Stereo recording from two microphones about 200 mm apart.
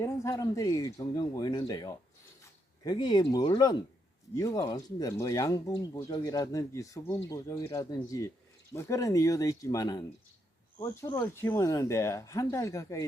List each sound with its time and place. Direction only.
0.0 s speech: 15° left (ahead or behind)